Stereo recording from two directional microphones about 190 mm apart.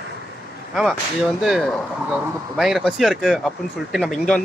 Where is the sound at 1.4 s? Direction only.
Centre (ahead or behind).